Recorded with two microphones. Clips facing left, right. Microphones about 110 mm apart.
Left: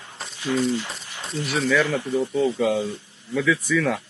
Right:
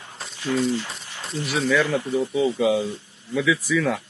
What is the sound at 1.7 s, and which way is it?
A man's voice, 15° right (ahead or behind).